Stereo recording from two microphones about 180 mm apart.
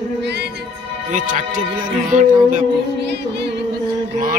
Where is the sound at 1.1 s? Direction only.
45° right (ahead or behind).